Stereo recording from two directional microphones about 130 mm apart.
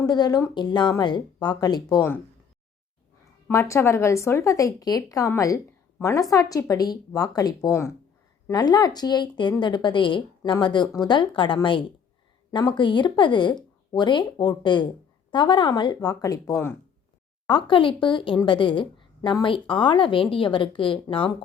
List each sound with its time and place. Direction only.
0.0 s a woman's voice: 30° left (ahead or behind)
3.5 s a woman's voice: 20° left (ahead or behind)
17.5 s a woman's voice: 40° left (ahead or behind)